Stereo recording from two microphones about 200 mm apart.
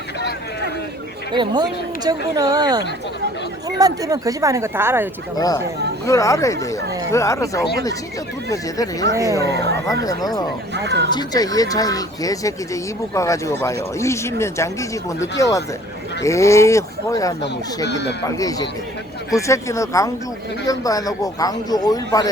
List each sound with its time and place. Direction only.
1.3 s speech: 25° right (ahead or behind)
5.4 s speech: 20° left (ahead or behind)
9.5 s speech: 55° right (ahead or behind)
9.8 s speech: 15° left (ahead or behind)
10.8 s speech: 60° right (ahead or behind)
11.1 s speech: 20° left (ahead or behind)
17.8 s speech: 60° left (ahead or behind)
18.3 s speech: 15° left (ahead or behind)